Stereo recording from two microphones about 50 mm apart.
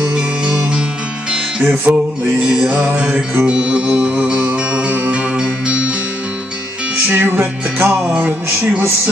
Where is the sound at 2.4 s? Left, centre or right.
Centre.